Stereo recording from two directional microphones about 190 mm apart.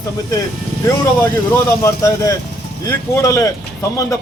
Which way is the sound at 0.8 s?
15° left (ahead or behind).